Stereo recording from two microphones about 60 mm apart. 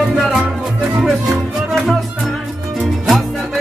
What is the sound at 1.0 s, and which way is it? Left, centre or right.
Music, centre.